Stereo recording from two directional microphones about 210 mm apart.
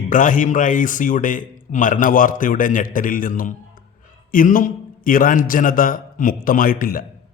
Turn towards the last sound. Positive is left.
turn(degrees=40)  # may be behind; listen again after turning